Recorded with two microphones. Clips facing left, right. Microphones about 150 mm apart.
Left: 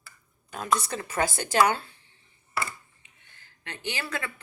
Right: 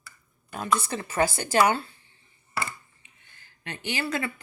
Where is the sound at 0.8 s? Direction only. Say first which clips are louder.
Right 2 dB; 5° right (ahead or behind).